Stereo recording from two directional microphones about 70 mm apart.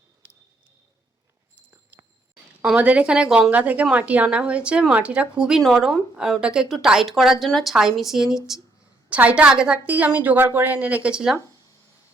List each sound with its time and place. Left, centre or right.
0.2 s a sound: right
2.7 s a woman's voice: centre
5.5 s speech: centre
9.0 s a woman's voice: centre
10.7 s speech: centre